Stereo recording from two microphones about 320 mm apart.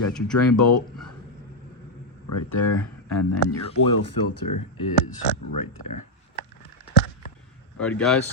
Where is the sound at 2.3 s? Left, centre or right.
Left.